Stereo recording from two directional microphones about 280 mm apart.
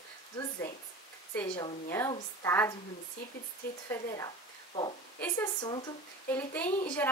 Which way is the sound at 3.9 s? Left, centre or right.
Centre.